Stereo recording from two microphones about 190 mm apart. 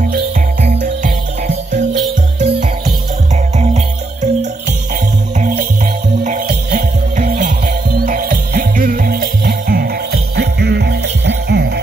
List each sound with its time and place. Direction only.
0.1 s music: 50° right (ahead or behind)
2.4 s music: 35° right (ahead or behind); by 11.8 s 60° right (ahead or behind)